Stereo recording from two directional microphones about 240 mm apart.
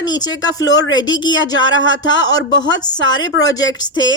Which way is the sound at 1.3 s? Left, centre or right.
Left.